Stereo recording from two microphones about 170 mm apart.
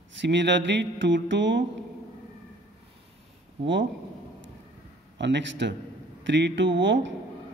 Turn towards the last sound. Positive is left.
turn(degrees=-90)